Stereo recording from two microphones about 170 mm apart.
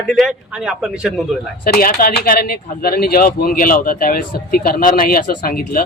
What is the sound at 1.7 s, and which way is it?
Speech, 60° left (ahead or behind).